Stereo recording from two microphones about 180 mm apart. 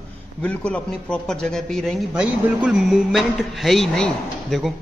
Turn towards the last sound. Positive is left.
turn(degrees=0)  # may be behind; listen again after turning